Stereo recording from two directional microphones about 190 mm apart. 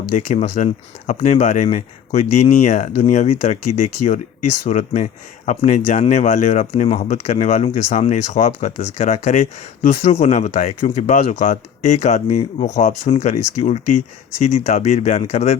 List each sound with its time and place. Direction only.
0.1 s speech: 40° left (ahead or behind)